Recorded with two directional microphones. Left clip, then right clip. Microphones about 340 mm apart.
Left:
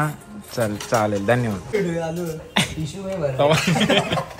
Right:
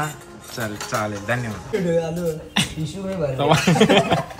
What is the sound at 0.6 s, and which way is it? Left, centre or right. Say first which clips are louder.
Speech: left 4 dB; centre.